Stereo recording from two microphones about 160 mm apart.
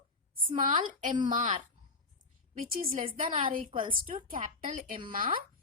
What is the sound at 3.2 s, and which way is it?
Speech, 35° right (ahead or behind).